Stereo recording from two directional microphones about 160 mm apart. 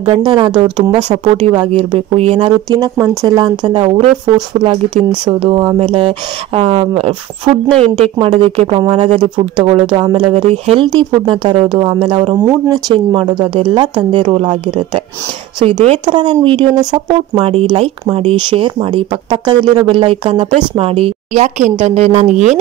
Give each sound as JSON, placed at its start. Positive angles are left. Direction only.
{"t": 0.2, "sound": "speech", "side_deg": -25}
{"t": 1.7, "sound": "speech", "side_deg": -40}
{"t": 15.6, "sound": "speech", "side_deg": -40}